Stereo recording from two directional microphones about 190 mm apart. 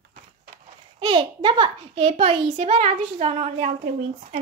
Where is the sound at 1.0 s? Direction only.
25° right (ahead or behind).